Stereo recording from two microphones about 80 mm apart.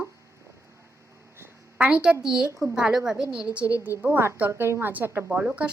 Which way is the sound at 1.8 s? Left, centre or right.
Centre.